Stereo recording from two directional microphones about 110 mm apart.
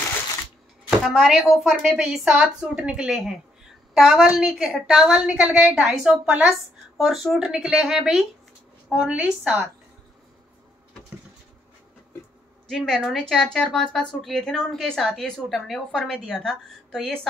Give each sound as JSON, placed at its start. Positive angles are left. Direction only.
{"t": 0.8, "sound": "a woman's voice", "side_deg": 0}
{"t": 12.6, "sound": "speech", "side_deg": 5}